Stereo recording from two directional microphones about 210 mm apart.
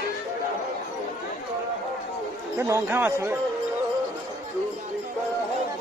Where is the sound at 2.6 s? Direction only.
10° right (ahead or behind).